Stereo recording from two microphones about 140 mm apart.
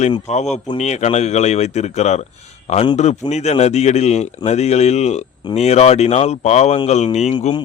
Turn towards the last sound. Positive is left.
turn(degrees=50)  # may be behind; listen again after turning